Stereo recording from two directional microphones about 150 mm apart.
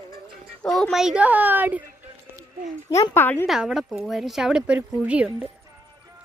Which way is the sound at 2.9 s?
15° left (ahead or behind).